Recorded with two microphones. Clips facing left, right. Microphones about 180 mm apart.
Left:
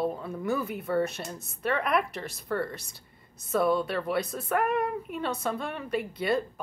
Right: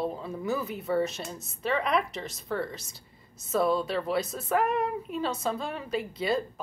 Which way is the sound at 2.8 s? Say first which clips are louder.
Even; 60° left (ahead or behind).